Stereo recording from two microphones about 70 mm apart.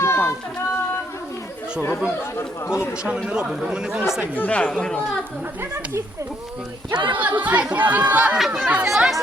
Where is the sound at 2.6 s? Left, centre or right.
Left.